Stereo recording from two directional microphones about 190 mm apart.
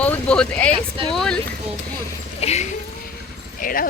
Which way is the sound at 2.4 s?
35° left (ahead or behind).